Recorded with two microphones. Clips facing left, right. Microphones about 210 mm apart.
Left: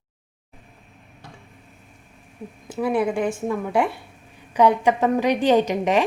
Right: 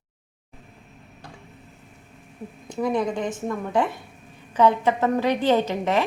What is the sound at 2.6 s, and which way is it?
A woman's voice, 5° left (ahead or behind).